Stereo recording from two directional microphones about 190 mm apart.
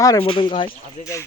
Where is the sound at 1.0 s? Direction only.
15° left (ahead or behind).